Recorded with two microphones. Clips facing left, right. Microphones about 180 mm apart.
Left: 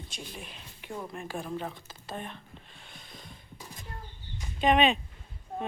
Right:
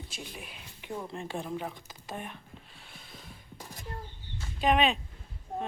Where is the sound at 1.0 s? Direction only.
25° right (ahead or behind).